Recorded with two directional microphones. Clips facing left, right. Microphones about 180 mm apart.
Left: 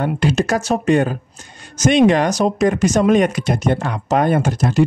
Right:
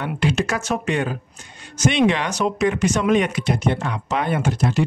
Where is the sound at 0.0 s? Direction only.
40° left (ahead or behind).